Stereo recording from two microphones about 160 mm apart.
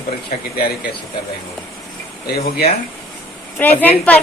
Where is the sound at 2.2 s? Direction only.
75° left (ahead or behind).